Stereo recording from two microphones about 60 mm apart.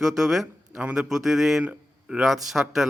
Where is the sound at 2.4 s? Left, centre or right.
Centre.